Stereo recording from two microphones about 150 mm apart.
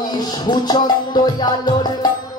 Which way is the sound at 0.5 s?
30° left (ahead or behind).